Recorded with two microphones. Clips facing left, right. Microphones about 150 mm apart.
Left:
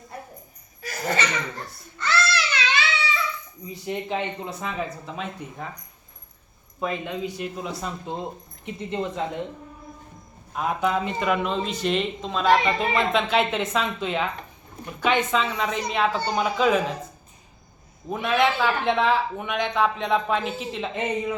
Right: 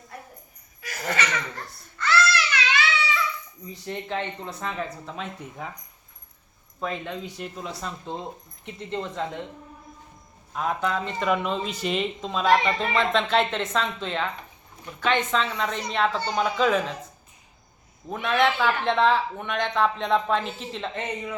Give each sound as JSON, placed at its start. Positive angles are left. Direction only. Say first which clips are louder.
{"t": 0.8, "sound": "laughter", "louder": "left 2 dB", "side_deg": 30}
{"t": 2.0, "sound": "a sound", "louder": "right 2 dB", "side_deg": 25}
{"t": 3.7, "sound": "speech", "louder": "left 3 dB", "side_deg": 10}
{"t": 6.7, "sound": "speech", "louder": "left 3 dB", "side_deg": 10}
{"t": 10.5, "sound": "speech", "louder": "left 2 dB", "side_deg": 5}
{"t": 18.1, "sound": "speech", "louder": "left 1 dB", "side_deg": 5}